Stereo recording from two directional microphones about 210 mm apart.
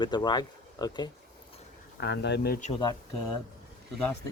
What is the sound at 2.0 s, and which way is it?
Speech, 55° left (ahead or behind).